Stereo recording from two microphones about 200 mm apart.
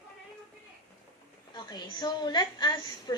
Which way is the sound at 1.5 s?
20° left (ahead or behind).